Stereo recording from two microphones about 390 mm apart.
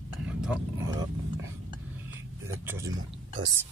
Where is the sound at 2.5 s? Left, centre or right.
Centre.